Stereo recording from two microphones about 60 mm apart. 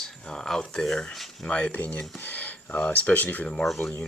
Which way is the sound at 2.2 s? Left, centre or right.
Left.